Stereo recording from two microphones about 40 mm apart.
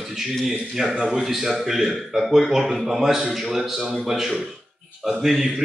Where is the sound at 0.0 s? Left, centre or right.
Centre.